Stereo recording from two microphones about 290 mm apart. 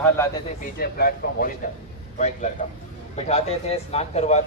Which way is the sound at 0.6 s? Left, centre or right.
Left.